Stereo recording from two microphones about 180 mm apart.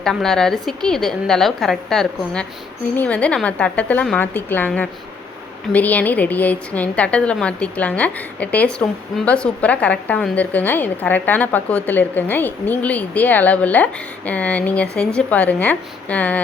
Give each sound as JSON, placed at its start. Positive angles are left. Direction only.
{"t": 0.0, "sound": "a woman's voice", "side_deg": 5}